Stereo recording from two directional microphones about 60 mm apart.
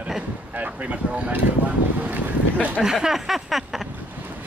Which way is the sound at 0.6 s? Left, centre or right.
Right.